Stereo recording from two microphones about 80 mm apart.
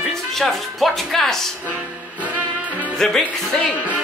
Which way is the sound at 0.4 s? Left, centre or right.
Centre.